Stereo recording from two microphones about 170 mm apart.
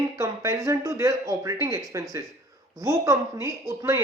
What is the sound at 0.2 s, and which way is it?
A man's voice, 15° right (ahead or behind).